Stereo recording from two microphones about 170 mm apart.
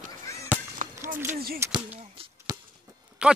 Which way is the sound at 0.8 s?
50° right (ahead or behind).